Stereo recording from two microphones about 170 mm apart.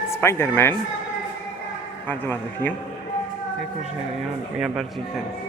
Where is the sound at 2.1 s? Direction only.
10° left (ahead or behind).